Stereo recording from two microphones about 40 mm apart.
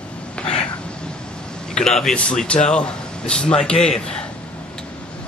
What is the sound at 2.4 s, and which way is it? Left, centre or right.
Speech, left.